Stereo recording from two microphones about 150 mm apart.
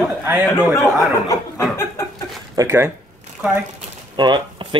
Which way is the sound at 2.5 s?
15° right (ahead or behind).